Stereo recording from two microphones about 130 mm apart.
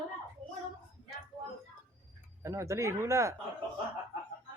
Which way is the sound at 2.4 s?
20° right (ahead or behind).